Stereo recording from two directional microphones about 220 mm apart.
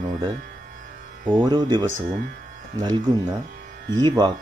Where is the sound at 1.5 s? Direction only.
20° right (ahead or behind).